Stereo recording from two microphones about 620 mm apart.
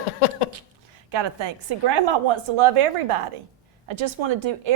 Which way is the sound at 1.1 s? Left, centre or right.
Right.